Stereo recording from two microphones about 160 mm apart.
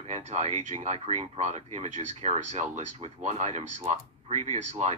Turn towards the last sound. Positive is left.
turn(degrees=-45)  # may be behind; listen again after turning